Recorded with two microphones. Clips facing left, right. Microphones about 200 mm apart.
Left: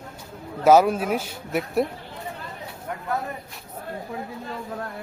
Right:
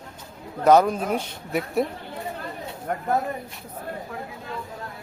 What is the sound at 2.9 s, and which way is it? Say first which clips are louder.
Speech: right 5 dB; 50° right (ahead or behind).